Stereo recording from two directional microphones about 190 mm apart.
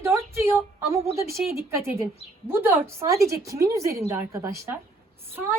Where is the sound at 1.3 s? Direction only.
15° right (ahead or behind).